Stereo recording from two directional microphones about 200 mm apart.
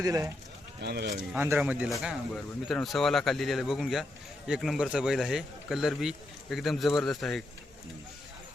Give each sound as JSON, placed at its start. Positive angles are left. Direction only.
{"t": 0.0, "sound": "speech", "side_deg": -15}
{"t": 0.8, "sound": "speech", "side_deg": -55}
{"t": 1.3, "sound": "speech", "side_deg": -10}